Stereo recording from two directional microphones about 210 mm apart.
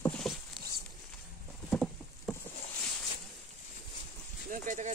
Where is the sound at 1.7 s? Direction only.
5° left (ahead or behind).